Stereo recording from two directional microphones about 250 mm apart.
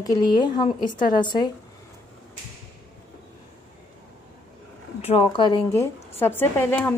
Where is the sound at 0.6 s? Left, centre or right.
Left.